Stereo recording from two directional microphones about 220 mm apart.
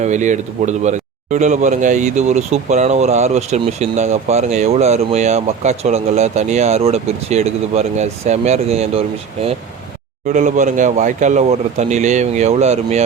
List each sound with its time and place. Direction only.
0.0 s speech: 35° right (ahead or behind)